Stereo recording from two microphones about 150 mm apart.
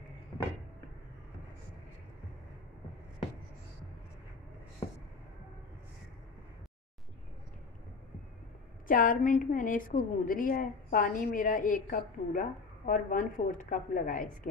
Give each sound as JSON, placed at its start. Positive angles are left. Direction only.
{"t": 8.8, "sound": "a woman's voice", "side_deg": 65}